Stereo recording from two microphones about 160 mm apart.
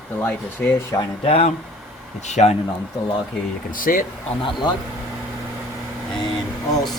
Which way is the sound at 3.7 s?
60° left (ahead or behind).